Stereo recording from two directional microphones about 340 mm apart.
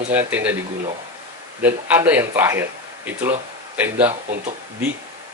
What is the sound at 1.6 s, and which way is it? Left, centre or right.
Speech, centre.